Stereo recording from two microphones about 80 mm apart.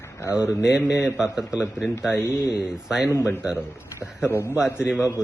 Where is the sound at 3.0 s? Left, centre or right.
Left.